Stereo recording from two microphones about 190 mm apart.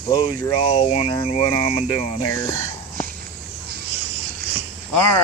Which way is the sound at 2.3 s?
15° left (ahead or behind).